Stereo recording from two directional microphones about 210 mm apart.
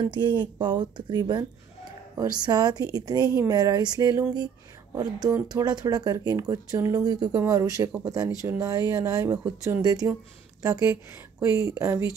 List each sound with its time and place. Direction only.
0.0 s speech: 20° right (ahead or behind)
9.4 s speech: 5° right (ahead or behind)
9.8 s speech: 20° right (ahead or behind)